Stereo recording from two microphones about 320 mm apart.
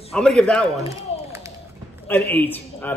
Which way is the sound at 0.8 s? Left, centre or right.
Centre.